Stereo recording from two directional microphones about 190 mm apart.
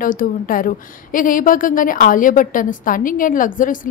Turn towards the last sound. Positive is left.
turn(degrees=45)  # may be behind; listen again after turning